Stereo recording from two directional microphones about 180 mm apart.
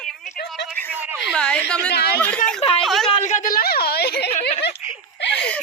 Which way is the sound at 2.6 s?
30° left (ahead or behind).